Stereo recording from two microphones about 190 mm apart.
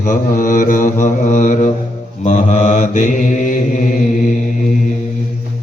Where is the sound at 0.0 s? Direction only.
45° left (ahead or behind).